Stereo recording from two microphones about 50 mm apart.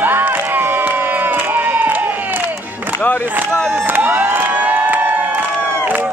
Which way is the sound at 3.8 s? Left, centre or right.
Right.